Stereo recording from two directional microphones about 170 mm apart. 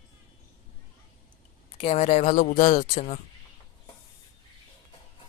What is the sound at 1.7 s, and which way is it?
Speech, 35° left (ahead or behind).